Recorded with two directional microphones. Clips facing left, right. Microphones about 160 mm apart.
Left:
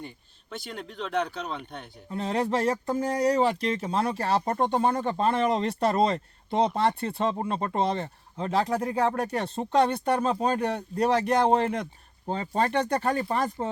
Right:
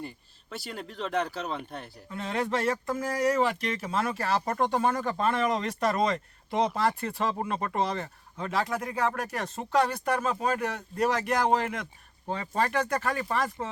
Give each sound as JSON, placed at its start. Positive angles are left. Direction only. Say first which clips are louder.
{"t": 0.5, "sound": "speech", "louder": "left 1 dB", "side_deg": -5}
{"t": 2.0, "sound": "speech", "louder": "left 3 dB", "side_deg": 35}